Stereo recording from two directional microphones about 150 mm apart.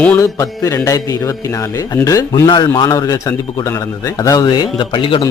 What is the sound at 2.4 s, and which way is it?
A man's voice, 30° left (ahead or behind).